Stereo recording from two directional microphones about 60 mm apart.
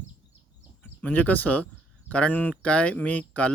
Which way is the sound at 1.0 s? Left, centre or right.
Left.